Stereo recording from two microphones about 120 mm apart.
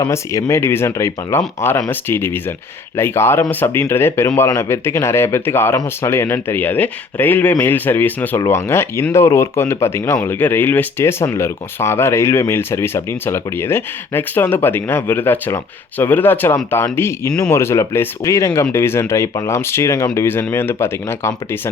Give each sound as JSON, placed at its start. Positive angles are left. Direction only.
{"t": 0.1, "sound": "speech", "side_deg": 25}